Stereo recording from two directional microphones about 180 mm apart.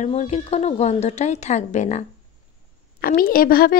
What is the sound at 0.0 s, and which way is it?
A woman's voice, 40° left (ahead or behind).